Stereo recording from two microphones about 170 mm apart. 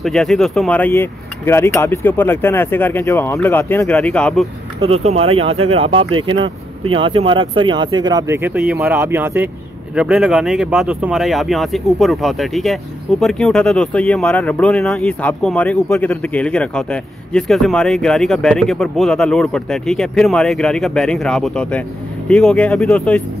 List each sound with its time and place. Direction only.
0.0 s speech: centre (ahead or behind)
4.7 s speech: 35° right (ahead or behind); by 23.2 s 5° left (ahead or behind)